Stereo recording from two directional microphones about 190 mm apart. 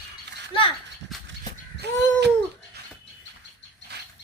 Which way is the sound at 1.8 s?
60° right (ahead or behind).